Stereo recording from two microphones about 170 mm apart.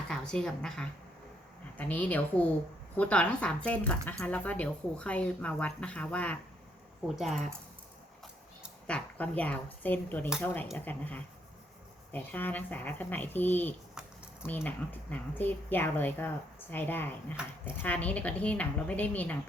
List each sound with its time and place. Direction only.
0.1 s a woman's voice: 5° left (ahead or behind)
8.9 s a woman's voice: 10° left (ahead or behind)